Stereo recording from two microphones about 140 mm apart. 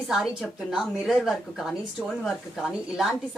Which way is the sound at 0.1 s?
Centre (ahead or behind).